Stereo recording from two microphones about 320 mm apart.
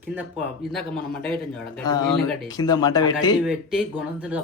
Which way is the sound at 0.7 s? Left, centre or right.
Centre.